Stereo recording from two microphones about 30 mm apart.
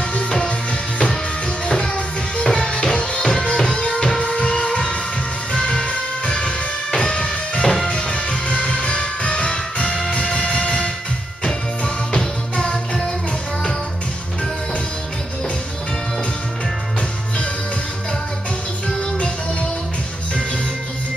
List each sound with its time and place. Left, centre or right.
2.3 s music: left